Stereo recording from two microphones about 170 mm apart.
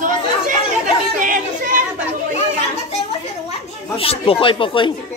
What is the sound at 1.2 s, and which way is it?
Speech, 50° right (ahead or behind).